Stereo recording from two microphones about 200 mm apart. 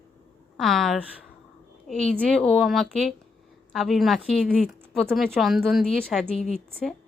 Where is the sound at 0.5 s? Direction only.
Centre (ahead or behind).